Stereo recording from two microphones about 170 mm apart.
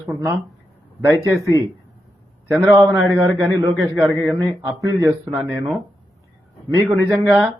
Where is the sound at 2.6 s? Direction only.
20° right (ahead or behind).